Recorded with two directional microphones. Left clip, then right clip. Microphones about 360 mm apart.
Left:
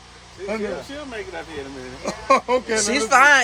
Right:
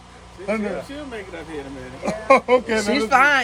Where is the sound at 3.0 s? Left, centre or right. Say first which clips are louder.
Left 3 dB; centre.